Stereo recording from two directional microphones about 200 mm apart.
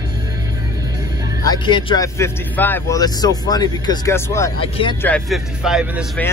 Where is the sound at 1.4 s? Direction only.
25° left (ahead or behind); by 6.0 s centre (ahead or behind).